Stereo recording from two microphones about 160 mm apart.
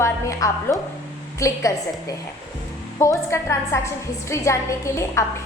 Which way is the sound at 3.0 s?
20° left (ahead or behind).